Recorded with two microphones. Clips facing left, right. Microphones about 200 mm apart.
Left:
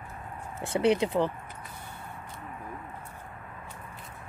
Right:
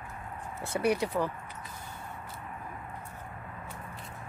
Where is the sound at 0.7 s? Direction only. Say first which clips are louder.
Left 4 dB; 25° left (ahead or behind).